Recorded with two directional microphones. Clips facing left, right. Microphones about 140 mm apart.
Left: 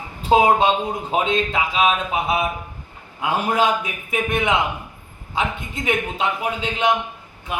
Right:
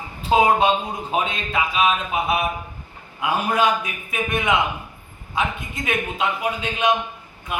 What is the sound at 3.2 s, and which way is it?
Speech, 30° left (ahead or behind).